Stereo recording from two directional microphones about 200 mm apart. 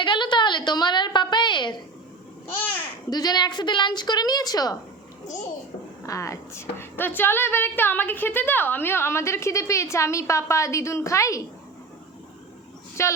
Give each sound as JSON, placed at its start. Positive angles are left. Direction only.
{"t": 0.0, "sound": "a sound", "side_deg": 25}
{"t": 3.1, "sound": "a woman's voice", "side_deg": 20}
{"t": 13.0, "sound": "a woman's voice", "side_deg": 15}